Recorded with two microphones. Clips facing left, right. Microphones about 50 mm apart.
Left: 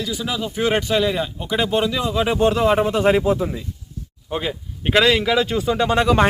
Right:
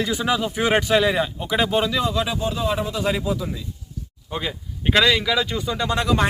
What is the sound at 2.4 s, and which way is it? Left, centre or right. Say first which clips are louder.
Speech: left 7 dB; left.